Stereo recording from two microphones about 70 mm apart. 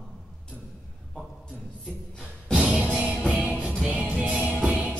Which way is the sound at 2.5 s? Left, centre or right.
Centre.